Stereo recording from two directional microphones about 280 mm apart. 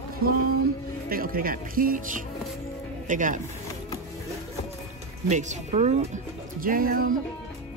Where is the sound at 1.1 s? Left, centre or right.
Right.